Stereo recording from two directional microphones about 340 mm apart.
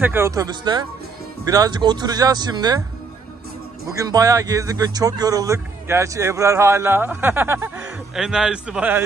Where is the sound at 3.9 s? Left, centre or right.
Centre.